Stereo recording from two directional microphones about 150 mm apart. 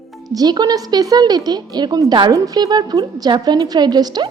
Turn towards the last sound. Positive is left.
turn(degrees=-25)  # may be behind; listen again after turning